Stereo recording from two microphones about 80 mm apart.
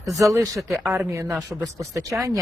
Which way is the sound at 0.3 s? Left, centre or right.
Right.